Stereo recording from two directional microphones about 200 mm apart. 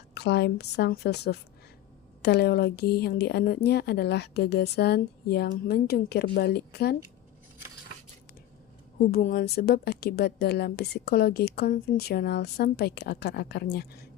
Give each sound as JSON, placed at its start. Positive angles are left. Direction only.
{"t": 0.1, "sound": "a woman's voice", "side_deg": 55}
{"t": 9.1, "sound": "a woman's voice", "side_deg": 45}